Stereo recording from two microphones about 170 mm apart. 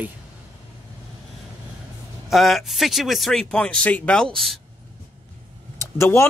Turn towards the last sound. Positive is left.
turn(degrees=15)  # may be behind; listen again after turning